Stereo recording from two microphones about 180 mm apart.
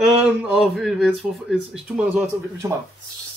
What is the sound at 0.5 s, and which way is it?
Speech, centre (ahead or behind).